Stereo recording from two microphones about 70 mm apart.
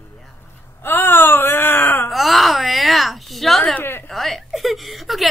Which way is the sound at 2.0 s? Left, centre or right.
Centre.